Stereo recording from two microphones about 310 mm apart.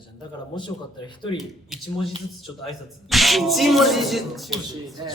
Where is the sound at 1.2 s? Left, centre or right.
Centre.